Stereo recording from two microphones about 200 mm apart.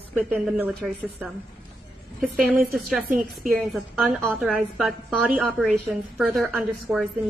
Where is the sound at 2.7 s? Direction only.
Centre (ahead or behind).